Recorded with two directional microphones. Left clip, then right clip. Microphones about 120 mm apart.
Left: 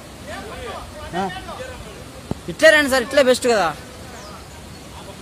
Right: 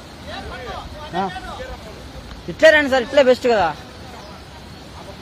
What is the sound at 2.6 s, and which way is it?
Speech, 15° left (ahead or behind).